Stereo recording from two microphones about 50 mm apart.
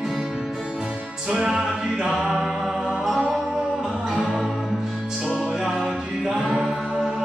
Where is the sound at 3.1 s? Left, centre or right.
Centre.